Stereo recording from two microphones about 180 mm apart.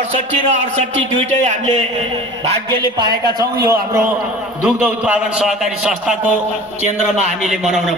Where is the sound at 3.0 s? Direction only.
25° right (ahead or behind).